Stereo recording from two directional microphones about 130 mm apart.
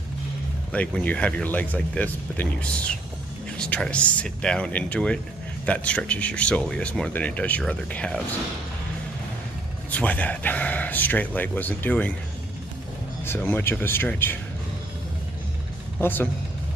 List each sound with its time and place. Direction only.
0.7 s speech: 10° left (ahead or behind)
9.8 s speech: 10° left (ahead or behind)
13.2 s speech: 15° left (ahead or behind)
16.0 s speech: 15° left (ahead or behind)